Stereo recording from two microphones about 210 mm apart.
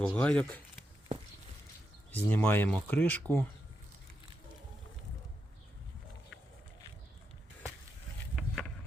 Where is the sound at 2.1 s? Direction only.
10° left (ahead or behind).